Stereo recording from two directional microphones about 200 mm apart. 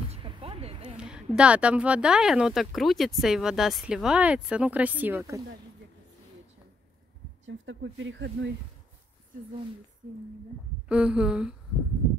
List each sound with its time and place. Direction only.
0.1 s a sound: 25° right (ahead or behind)
0.9 s a woman's voice: 5° right (ahead or behind)
7.4 s speech: 70° right (ahead or behind)
10.9 s a woman's voice: 5° right (ahead or behind)